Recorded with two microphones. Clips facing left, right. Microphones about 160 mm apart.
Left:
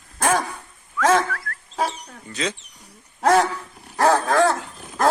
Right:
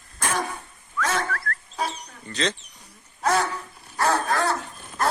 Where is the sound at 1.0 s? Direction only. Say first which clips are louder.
Left 8 dB; 90° left.